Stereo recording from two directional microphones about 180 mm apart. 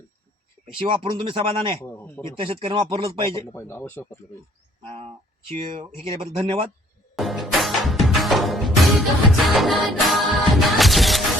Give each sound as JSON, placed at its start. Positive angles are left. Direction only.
{"t": 0.8, "sound": "speech", "side_deg": -30}
{"t": 1.9, "sound": "speech", "side_deg": 10}
{"t": 2.4, "sound": "speech", "side_deg": -30}
{"t": 3.3, "sound": "speech", "side_deg": 15}
{"t": 4.9, "sound": "speech", "side_deg": -35}
{"t": 6.4, "sound": "speech", "side_deg": -30}
{"t": 7.2, "sound": "music", "side_deg": 0}